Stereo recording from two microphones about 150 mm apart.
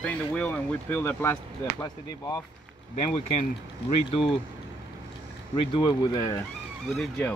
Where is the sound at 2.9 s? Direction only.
40° left (ahead or behind).